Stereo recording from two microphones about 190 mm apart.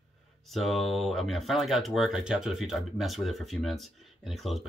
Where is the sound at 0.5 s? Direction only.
Centre (ahead or behind).